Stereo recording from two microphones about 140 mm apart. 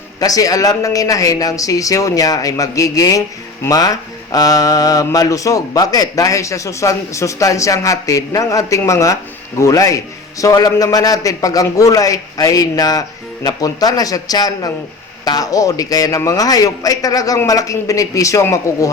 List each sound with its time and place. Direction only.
0.2 s a woman's voice: 25° left (ahead or behind)